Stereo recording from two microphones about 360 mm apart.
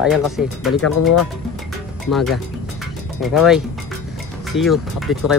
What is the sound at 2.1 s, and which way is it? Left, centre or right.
Speech, centre.